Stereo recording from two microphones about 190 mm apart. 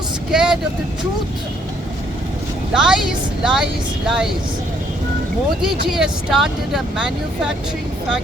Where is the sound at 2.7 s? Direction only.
5° right (ahead or behind).